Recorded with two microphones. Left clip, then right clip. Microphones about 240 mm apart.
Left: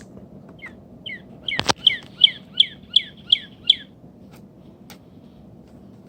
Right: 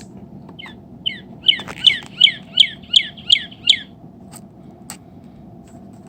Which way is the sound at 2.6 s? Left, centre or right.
Right.